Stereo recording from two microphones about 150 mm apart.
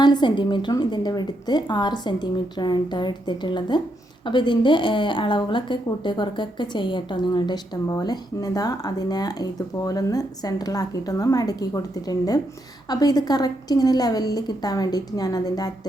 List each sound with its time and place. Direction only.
0.0 s a woman's voice: 30° left (ahead or behind)